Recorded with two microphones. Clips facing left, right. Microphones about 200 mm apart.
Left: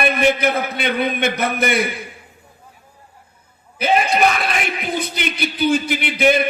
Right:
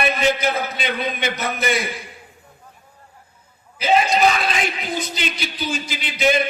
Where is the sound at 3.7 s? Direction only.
60° left (ahead or behind).